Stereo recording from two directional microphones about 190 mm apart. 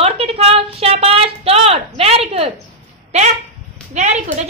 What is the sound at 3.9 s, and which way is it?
Speech, 35° right (ahead or behind).